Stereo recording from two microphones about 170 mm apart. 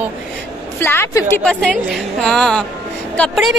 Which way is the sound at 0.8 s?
15° left (ahead or behind).